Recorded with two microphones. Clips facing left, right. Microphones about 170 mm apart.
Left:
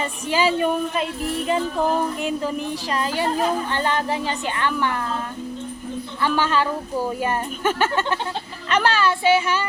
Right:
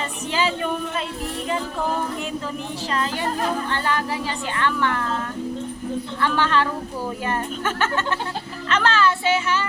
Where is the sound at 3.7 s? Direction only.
20° left (ahead or behind).